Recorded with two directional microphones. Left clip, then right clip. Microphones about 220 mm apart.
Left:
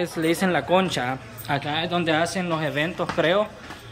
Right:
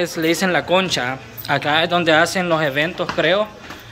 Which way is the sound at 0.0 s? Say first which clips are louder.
Right 5 dB; 10° left (ahead or behind).